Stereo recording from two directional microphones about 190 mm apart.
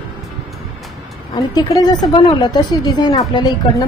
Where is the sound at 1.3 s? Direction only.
20° left (ahead or behind).